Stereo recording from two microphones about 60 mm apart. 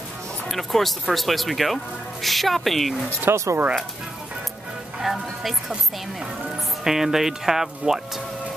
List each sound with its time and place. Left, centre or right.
0.5 s speech: centre
3.3 s speech: right
5.0 s speech: centre
6.8 s speech: centre